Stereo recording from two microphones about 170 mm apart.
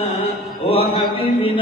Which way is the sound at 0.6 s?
35° left (ahead or behind).